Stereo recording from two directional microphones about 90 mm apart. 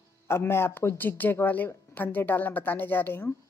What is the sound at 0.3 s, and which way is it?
Speech, 25° left (ahead or behind).